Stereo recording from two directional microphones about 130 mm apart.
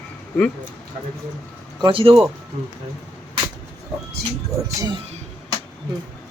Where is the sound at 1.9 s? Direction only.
45° right (ahead or behind).